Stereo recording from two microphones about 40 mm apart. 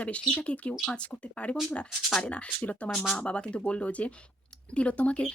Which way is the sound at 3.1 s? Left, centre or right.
Left.